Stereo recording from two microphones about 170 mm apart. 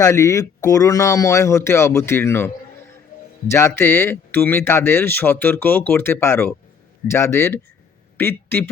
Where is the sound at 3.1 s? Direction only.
55° left (ahead or behind).